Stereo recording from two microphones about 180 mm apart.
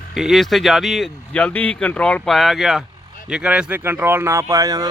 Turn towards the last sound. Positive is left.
turn(degrees=-20)  # may be behind; listen again after turning